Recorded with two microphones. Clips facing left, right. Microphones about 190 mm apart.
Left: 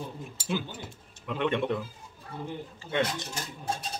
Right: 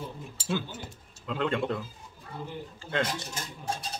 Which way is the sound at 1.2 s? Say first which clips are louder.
Left 1 dB; 20° left (ahead or behind).